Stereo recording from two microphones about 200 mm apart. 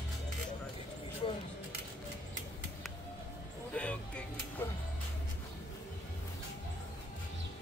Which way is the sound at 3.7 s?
5° left (ahead or behind).